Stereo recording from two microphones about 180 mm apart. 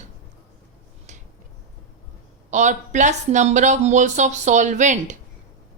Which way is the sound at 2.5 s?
40° right (ahead or behind).